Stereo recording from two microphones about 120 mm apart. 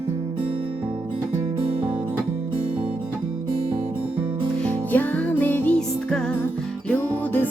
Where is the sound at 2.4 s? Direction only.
45° right (ahead or behind).